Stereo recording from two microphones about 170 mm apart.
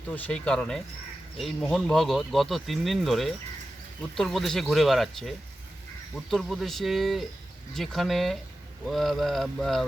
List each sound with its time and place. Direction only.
0.1 s speech: 5° left (ahead or behind)
6.3 s speech: centre (ahead or behind)